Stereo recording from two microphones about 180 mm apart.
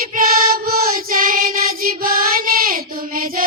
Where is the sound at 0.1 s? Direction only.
50° right (ahead or behind).